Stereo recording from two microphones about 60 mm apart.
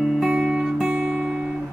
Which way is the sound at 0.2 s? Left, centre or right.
Centre.